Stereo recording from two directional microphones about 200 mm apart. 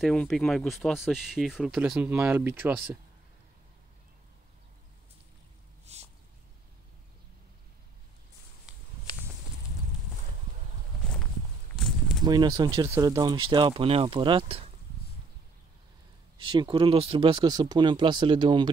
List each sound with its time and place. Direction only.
0.0 s speech: 5° left (ahead or behind)
5.9 s a sound: 35° right (ahead or behind)
8.7 s walk: 5° right (ahead or behind)
12.3 s speech: 20° right (ahead or behind)
16.3 s speech: 25° right (ahead or behind)